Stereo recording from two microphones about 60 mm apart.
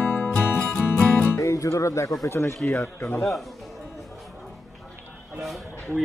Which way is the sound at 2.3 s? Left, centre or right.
Left.